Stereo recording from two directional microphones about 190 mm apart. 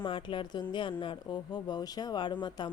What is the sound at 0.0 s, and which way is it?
A woman's voice, 25° left (ahead or behind).